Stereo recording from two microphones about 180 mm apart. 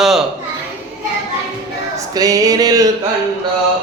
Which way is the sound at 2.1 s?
20° right (ahead or behind).